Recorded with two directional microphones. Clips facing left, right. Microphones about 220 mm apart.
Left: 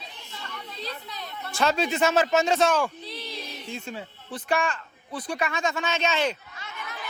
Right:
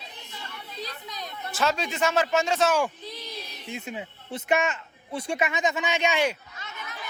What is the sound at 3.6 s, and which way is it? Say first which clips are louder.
A man's voice: right 3 dB; 15° right (ahead or behind).